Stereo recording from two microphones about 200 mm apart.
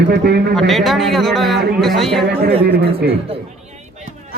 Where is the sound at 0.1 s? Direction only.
50° right (ahead or behind).